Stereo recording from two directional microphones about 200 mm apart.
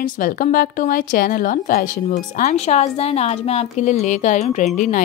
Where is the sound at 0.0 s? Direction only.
45° left (ahead or behind).